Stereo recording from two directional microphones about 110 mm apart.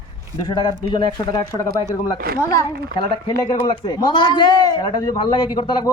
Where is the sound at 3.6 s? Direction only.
40° left (ahead or behind).